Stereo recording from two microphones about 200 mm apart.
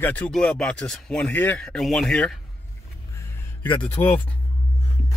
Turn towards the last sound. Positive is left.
turn(degrees=35)  # may be behind; listen again after turning